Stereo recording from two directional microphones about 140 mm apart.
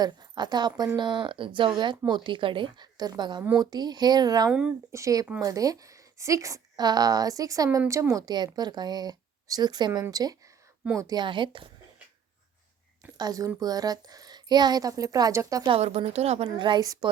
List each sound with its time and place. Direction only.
0.0 s a woman's voice: 30° right (ahead or behind)
4.4 s speech: 5° right (ahead or behind)
4.9 s a woman's voice: 20° right (ahead or behind)
13.1 s a woman's voice: 25° right (ahead or behind)
15.7 s a woman's voice: 50° right (ahead or behind)
16.6 s a woman's voice: 35° right (ahead or behind)